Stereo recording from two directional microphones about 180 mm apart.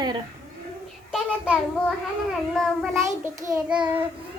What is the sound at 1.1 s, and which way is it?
Child singing, centre (ahead or behind).